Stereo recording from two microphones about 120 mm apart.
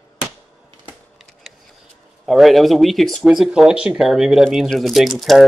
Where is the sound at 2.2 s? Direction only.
Centre (ahead or behind).